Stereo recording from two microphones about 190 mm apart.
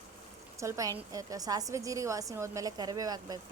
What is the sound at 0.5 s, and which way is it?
A woman's voice, 15° right (ahead or behind).